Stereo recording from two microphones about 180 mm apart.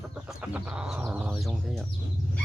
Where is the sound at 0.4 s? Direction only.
10° right (ahead or behind).